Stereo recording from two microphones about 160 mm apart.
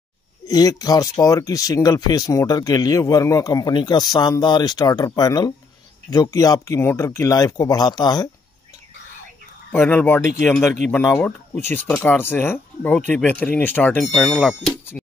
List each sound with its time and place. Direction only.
0.5 s speech: 25° left (ahead or behind)
9.7 s speech: 10° left (ahead or behind)
15.0 s a sound: 10° left (ahead or behind)